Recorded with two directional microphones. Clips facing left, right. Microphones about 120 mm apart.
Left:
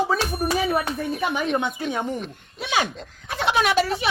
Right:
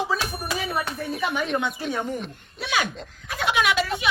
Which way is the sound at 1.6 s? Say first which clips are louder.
Left 1 dB; 25° left (ahead or behind).